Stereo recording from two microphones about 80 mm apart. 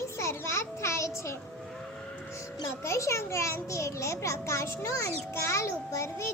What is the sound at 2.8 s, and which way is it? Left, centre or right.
A child's voice, left.